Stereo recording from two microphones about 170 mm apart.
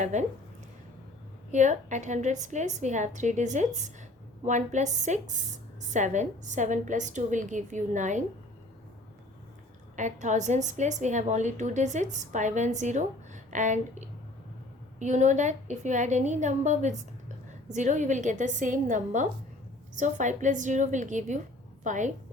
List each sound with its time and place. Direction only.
0.0 s a woman's voice: 45° right (ahead or behind)
1.5 s a woman's voice: 45° right (ahead or behind)
9.9 s a woman's voice: 45° right (ahead or behind)